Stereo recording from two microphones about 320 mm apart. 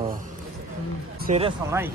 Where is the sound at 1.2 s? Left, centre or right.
Right.